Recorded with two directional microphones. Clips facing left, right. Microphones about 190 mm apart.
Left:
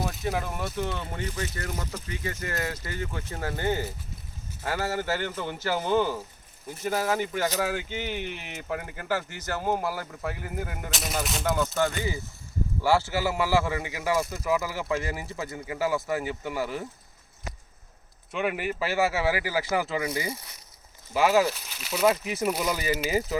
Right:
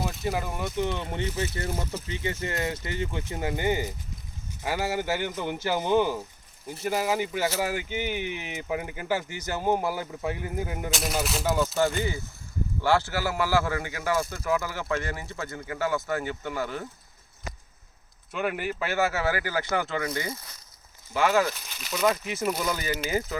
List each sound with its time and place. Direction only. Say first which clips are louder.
0.0 s speech: even; centre (ahead or behind)
10.9 s a man's voice: right 1 dB; centre (ahead or behind)
18.3 s a man's voice: left 1 dB; centre (ahead or behind)
21.1 s speech: left 2 dB; 5° left (ahead or behind)